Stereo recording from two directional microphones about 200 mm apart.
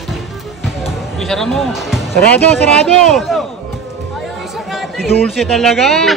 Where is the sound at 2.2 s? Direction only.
5° left (ahead or behind).